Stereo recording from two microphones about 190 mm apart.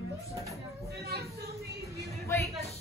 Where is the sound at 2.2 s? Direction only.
15° left (ahead or behind).